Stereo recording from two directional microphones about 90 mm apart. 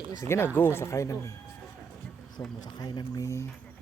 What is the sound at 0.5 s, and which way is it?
Speech, 25° left (ahead or behind).